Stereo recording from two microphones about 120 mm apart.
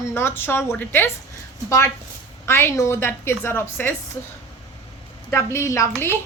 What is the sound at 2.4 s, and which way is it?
A woman's voice, 20° left (ahead or behind).